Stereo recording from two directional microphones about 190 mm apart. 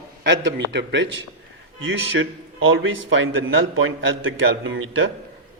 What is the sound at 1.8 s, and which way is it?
Speech, 90° right.